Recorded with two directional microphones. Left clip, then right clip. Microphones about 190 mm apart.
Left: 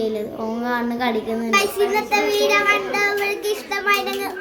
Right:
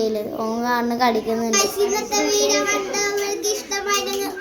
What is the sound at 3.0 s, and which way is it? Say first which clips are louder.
Child singing: left 2 dB; 25° left (ahead or behind).